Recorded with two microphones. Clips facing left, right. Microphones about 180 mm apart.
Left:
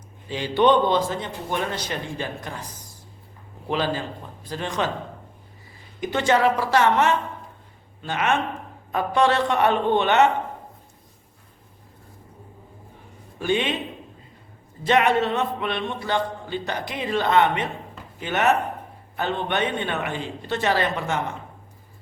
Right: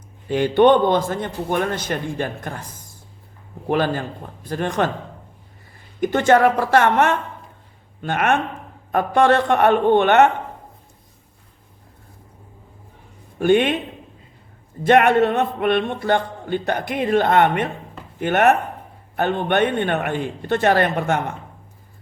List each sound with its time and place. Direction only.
0.3 s a man's voice: 55° right (ahead or behind)
3.7 s a man's voice: 55° right (ahead or behind)
6.0 s a man's voice: 50° right (ahead or behind)
13.4 s speech: 55° right (ahead or behind)
14.8 s a man's voice: 55° right (ahead or behind)